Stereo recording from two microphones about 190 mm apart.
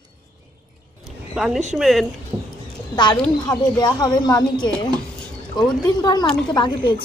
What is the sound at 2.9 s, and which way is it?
Speech, 25° left (ahead or behind).